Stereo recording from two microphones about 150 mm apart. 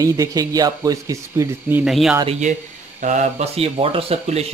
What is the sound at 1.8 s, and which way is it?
Speech, centre (ahead or behind).